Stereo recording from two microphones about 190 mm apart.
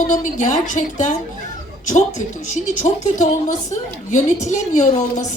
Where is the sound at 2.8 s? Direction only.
40° left (ahead or behind).